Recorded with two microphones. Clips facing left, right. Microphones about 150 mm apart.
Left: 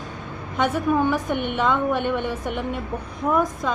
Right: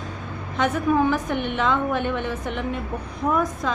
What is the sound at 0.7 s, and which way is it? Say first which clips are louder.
A woman's voice: right 1 dB; centre (ahead or behind).